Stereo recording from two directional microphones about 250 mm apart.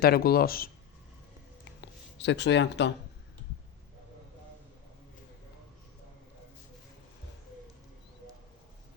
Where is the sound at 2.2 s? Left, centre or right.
Left.